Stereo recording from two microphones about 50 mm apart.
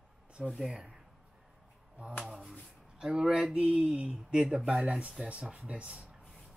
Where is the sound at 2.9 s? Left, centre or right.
Centre.